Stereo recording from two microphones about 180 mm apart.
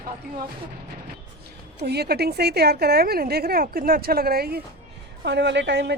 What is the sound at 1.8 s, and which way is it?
A woman's voice, 65° right (ahead or behind).